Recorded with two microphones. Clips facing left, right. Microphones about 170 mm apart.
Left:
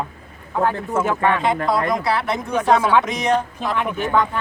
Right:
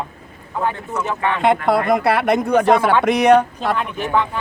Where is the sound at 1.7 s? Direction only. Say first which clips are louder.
Right 4 dB; 60° right (ahead or behind).